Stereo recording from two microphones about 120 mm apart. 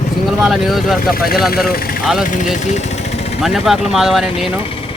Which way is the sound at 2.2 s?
90° left.